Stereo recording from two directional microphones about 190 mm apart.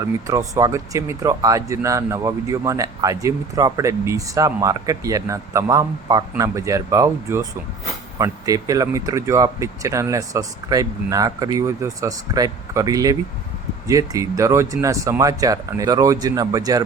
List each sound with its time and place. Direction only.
0.3 s speech: 15° right (ahead or behind)